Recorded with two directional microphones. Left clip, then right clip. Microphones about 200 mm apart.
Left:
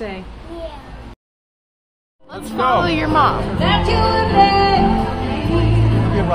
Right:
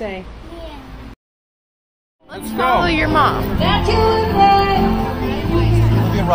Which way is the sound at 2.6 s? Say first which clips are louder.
Right 1 dB; 5° left (ahead or behind).